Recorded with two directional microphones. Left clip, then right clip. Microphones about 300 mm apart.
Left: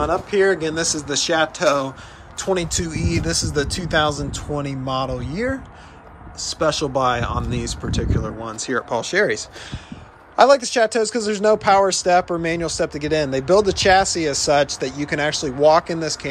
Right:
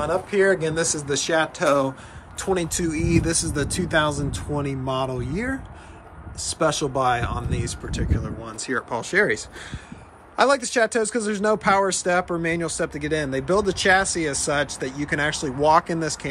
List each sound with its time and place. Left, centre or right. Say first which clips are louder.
0.0 s speech: left 3 dB; centre